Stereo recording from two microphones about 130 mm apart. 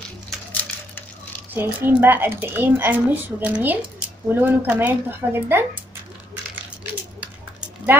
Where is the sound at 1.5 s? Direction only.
15° right (ahead or behind).